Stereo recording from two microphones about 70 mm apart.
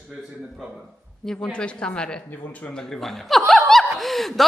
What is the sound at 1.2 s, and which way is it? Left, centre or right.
Speech, centre.